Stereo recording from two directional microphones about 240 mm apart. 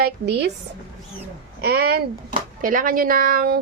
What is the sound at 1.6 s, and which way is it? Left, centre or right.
A woman's voice, right.